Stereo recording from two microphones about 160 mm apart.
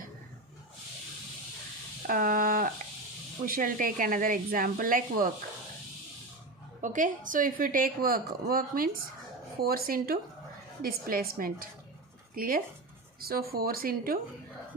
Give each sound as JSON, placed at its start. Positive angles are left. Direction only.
{"t": 2.0, "sound": "a sound", "side_deg": -60}
{"t": 3.4, "sound": "a woman's voice", "side_deg": -60}
{"t": 6.8, "sound": "a woman's voice", "side_deg": -55}